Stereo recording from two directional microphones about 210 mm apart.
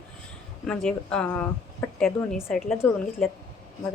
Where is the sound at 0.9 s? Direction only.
5° left (ahead or behind).